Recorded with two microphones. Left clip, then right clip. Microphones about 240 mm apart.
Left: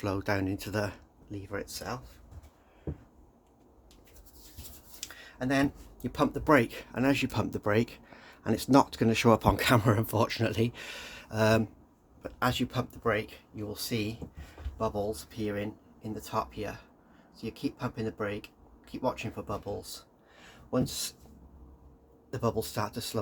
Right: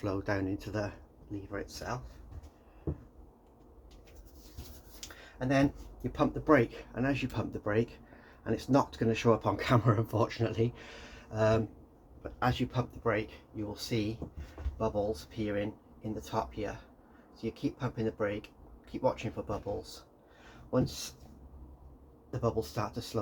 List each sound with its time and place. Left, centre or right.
0.0 s speech: left
5.4 s speech: left
6.0 s speech: left
20.4 s a sound: left
22.3 s speech: left